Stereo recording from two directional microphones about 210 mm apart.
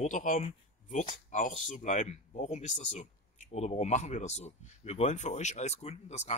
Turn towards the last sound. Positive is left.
turn(degrees=30)  # may be behind; listen again after turning